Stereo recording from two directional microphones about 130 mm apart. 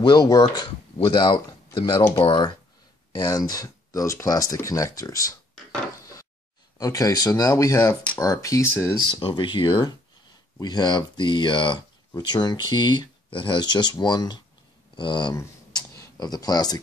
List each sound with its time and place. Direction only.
0.0 s speech: 30° left (ahead or behind)
6.8 s speech: 25° left (ahead or behind)
9.1 s speech: 40° left (ahead or behind)
15.3 s a sound: 25° left (ahead or behind)